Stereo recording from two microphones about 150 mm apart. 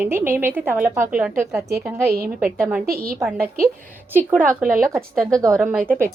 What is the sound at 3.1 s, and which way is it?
A woman's voice, 20° right (ahead or behind).